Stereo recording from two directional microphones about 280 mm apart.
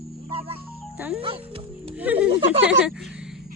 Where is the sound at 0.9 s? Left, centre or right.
Centre.